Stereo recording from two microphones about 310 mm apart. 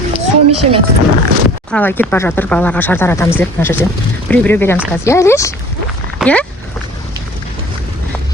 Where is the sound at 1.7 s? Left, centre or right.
Centre.